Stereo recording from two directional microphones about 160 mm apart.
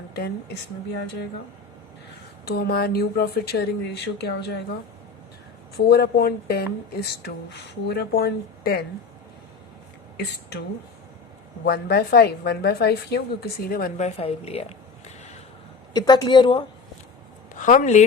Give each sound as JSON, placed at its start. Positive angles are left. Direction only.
{"t": 0.1, "sound": "a woman's voice", "side_deg": 80}
{"t": 2.4, "sound": "speech", "side_deg": 85}
{"t": 5.7, "sound": "a woman's voice", "side_deg": 80}
{"t": 11.6, "sound": "a woman's voice", "side_deg": 75}
{"t": 14.0, "sound": "a sound", "side_deg": 40}
{"t": 15.9, "sound": "a woman's voice", "side_deg": 25}
{"t": 17.5, "sound": "a woman's voice", "side_deg": 55}